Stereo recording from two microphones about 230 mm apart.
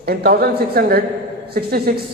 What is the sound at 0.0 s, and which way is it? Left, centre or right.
A man's voice, right.